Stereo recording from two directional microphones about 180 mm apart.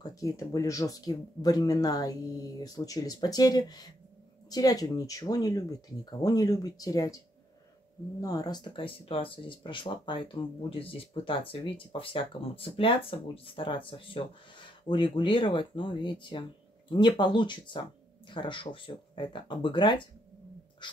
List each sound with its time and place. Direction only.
0.0 s speech: 20° left (ahead or behind)
8.2 s speech: 20° left (ahead or behind)